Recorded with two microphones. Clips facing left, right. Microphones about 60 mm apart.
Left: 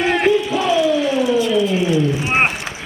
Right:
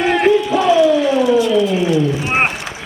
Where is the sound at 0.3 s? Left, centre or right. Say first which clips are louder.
Right 4 dB; right.